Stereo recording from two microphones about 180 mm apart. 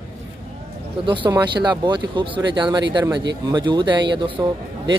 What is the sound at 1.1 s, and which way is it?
Speech, 25° right (ahead or behind).